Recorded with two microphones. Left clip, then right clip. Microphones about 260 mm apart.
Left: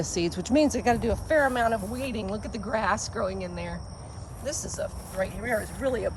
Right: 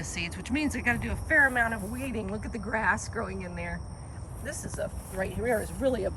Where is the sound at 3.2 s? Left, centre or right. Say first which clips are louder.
Left 5 dB; centre.